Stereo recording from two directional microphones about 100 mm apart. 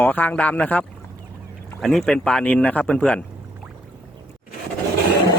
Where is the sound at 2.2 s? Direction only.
10° left (ahead or behind).